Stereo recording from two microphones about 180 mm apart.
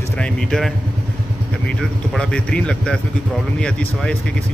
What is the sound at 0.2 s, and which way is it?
Speech, 5° left (ahead or behind).